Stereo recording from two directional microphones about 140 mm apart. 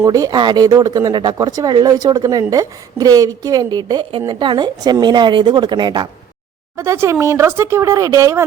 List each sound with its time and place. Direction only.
0.0 s speech: 25° right (ahead or behind)
6.7 s speech: 20° right (ahead or behind)